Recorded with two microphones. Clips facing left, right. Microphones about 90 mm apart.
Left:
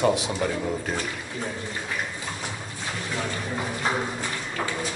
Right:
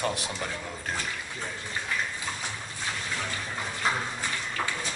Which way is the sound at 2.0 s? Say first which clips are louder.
Left 1 dB; 15° left (ahead or behind).